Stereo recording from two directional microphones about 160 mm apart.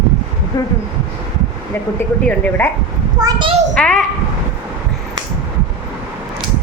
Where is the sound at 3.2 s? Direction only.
30° right (ahead or behind).